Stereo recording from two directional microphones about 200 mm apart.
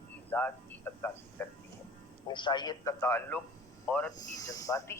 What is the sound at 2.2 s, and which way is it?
Speech, 25° left (ahead or behind).